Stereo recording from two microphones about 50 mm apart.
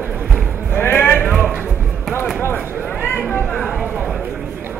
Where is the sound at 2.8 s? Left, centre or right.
Left.